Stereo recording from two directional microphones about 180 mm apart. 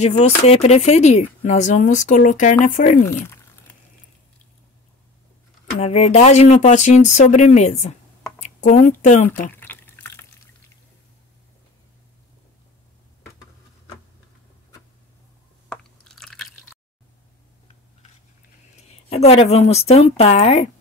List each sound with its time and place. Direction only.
0.0 s speech: 35° left (ahead or behind)
5.8 s speech: 40° left (ahead or behind)
9.5 s drip: 10° left (ahead or behind)
15.7 s chewing: 5° left (ahead or behind)
18.9 s a woman's voice: 35° left (ahead or behind)